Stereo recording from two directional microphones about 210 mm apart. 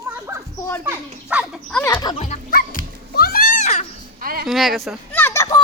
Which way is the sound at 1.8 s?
20° left (ahead or behind).